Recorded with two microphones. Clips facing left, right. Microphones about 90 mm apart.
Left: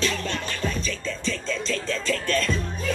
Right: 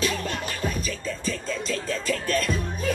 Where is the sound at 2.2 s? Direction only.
15° right (ahead or behind).